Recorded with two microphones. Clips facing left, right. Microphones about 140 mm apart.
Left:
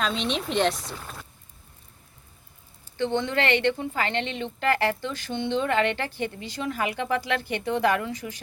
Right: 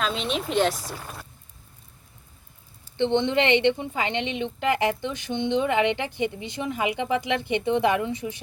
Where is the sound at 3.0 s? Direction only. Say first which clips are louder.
Right 3 dB; 25° right (ahead or behind).